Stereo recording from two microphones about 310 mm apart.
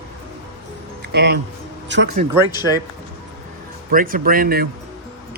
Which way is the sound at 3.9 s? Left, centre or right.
Right.